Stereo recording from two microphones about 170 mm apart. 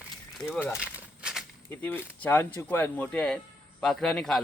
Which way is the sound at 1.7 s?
15° left (ahead or behind).